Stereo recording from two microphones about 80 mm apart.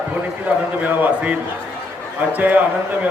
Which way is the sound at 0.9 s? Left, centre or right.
Centre.